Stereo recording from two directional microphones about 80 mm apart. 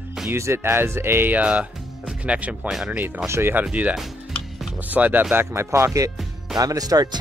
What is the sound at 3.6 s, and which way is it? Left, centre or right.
Speech, centre.